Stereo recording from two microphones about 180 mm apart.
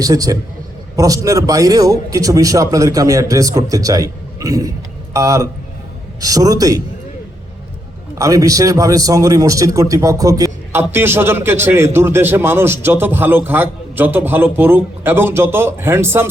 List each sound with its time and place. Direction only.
0.0 s a man's voice: 20° right (ahead or behind)
8.2 s a man's voice: 20° right (ahead or behind)